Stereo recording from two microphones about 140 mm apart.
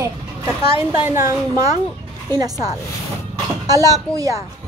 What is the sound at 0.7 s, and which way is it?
A woman's voice, 15° right (ahead or behind).